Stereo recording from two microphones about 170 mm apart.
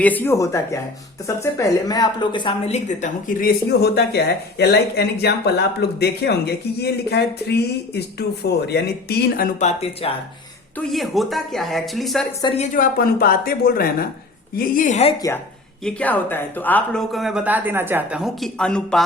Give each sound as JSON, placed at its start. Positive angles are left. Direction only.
{"t": 0.0, "sound": "speech", "side_deg": 10}
{"t": 10.8, "sound": "speech", "side_deg": 0}
{"t": 12.5, "sound": "a woman's voice", "side_deg": 50}
{"t": 15.8, "sound": "speech", "side_deg": 5}